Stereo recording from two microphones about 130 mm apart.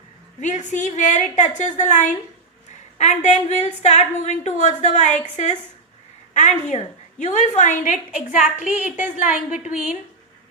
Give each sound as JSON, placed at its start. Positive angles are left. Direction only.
{"t": 0.3, "sound": "a woman's voice", "side_deg": 65}
{"t": 8.6, "sound": "a woman's voice", "side_deg": -10}
{"t": 9.1, "sound": "a woman's voice", "side_deg": 85}